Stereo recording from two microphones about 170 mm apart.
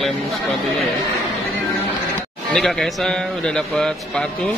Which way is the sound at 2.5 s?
Centre (ahead or behind).